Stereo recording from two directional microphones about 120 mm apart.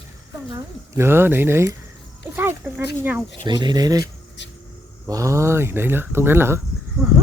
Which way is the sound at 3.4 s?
40° right (ahead or behind).